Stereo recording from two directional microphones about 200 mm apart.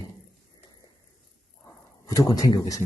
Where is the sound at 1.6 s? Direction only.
15° left (ahead or behind).